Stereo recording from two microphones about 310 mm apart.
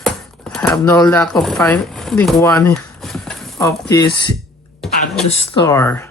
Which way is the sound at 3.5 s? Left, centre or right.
Centre.